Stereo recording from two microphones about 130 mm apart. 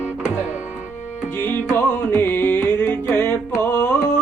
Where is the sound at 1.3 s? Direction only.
15° left (ahead or behind).